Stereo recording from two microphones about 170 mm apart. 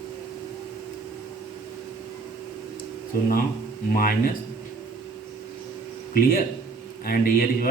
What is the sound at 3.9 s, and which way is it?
Speech, 55° left (ahead or behind).